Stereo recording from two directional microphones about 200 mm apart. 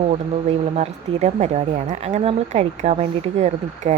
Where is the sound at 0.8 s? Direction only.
35° right (ahead or behind).